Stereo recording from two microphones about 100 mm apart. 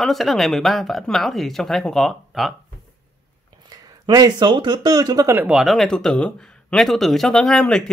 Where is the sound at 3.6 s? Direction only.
40° right (ahead or behind).